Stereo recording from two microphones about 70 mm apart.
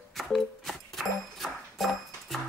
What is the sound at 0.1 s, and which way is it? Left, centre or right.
Music, centre.